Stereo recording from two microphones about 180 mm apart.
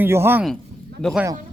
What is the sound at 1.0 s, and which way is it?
Speech, 5° right (ahead or behind).